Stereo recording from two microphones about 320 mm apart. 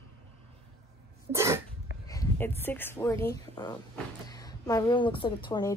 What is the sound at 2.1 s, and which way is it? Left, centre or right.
A woman's voice, centre.